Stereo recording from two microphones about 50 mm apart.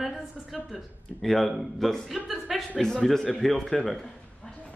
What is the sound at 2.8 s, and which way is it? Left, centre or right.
A man's voice, centre.